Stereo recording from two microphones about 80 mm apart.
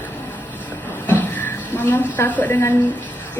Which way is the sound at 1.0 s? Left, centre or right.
Left.